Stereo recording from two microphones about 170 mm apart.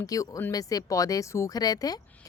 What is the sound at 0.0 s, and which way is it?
Speech, 20° left (ahead or behind).